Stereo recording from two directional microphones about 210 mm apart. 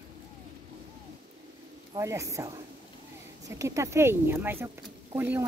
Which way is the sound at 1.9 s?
15° right (ahead or behind).